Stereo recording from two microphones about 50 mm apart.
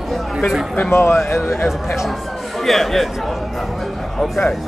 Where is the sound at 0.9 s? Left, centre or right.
Left.